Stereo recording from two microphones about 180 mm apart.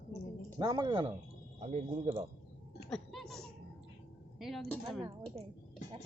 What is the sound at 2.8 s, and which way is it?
Music, centre (ahead or behind).